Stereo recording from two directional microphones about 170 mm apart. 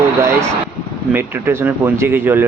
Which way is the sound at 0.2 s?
15° right (ahead or behind).